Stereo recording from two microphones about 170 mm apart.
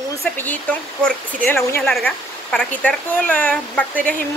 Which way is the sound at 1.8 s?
5° left (ahead or behind).